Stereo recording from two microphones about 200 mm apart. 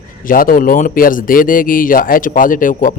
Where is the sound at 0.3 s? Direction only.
45° left (ahead or behind).